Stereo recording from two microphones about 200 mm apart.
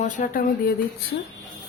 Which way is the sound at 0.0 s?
40° left (ahead or behind).